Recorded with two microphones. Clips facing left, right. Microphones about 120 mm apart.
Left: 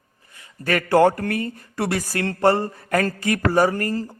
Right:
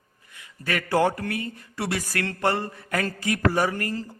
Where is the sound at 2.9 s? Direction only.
45° left (ahead or behind).